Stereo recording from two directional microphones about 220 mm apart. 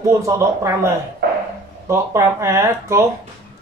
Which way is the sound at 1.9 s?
10° right (ahead or behind).